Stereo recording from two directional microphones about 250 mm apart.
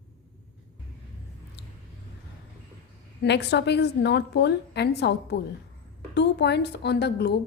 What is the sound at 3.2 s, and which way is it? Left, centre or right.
A woman's voice, left.